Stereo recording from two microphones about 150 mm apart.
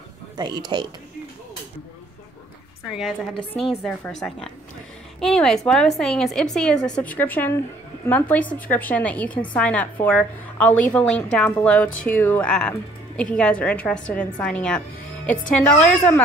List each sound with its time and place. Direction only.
0.4 s speech: 30° right (ahead or behind)
3.0 s a woman's voice: 5° left (ahead or behind)